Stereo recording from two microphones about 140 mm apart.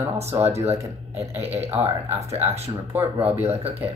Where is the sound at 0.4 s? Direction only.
50° right (ahead or behind).